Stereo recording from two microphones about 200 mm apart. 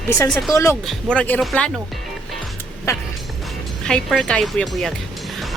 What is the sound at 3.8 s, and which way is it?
Speech, 5° left (ahead or behind).